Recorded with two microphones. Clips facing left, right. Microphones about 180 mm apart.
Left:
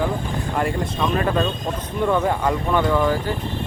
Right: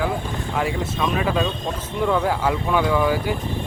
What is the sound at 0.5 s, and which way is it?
Speech, centre (ahead or behind).